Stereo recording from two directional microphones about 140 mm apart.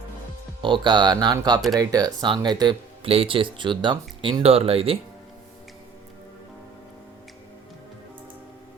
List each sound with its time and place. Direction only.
0.6 s speech: 35° right (ahead or behind)
3.1 s speech: 40° right (ahead or behind)